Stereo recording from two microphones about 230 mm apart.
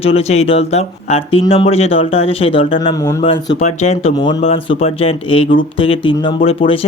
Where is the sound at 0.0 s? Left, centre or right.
Left.